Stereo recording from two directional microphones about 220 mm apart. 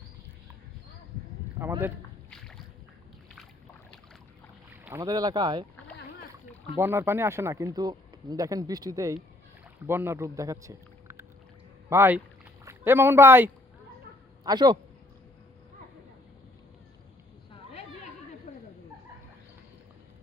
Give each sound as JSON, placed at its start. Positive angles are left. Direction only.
{"t": 1.6, "sound": "speech", "side_deg": -10}
{"t": 4.7, "sound": "speech", "side_deg": -10}
{"t": 6.7, "sound": "a man's voice", "side_deg": -10}
{"t": 17.5, "sound": "a sound", "side_deg": 30}